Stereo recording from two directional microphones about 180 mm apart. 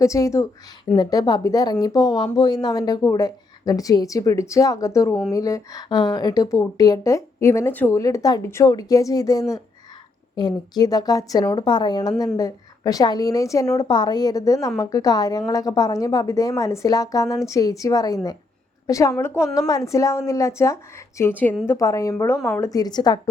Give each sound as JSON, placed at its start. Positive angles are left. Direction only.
{"t": 0.0, "sound": "a woman's voice", "side_deg": 15}